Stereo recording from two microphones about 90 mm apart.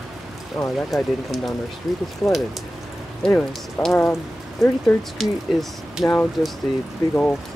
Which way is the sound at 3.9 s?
30° left (ahead or behind).